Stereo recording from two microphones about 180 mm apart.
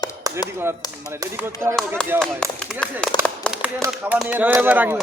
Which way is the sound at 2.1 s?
5° left (ahead or behind).